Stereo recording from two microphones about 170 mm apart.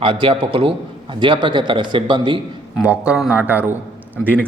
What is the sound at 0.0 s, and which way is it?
A man's voice, 30° right (ahead or behind).